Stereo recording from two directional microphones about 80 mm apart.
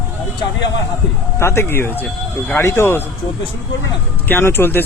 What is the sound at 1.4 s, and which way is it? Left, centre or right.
Speech, left.